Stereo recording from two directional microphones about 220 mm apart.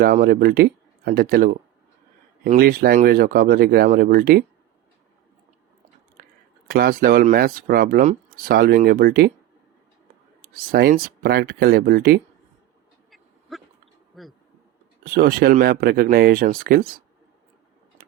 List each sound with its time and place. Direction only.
0.0 s speech: 40° right (ahead or behind)
6.7 s speech: 40° right (ahead or behind)
10.4 s speech: 45° right (ahead or behind)
13.1 s duck: centre (ahead or behind)
14.2 s speech: centre (ahead or behind)
15.0 s speech: 40° right (ahead or behind)